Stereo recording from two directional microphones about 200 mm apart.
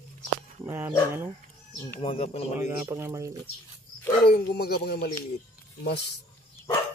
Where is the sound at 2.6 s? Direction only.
15° right (ahead or behind).